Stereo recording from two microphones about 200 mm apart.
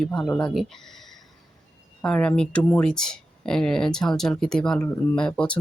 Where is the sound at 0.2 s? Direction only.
20° left (ahead or behind).